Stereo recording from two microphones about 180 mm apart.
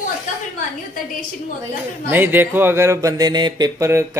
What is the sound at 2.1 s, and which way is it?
Speech, 10° right (ahead or behind).